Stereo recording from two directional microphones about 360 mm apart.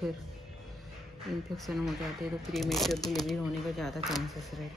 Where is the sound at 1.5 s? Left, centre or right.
Centre.